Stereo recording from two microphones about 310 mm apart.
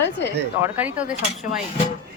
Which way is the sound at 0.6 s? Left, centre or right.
Centre.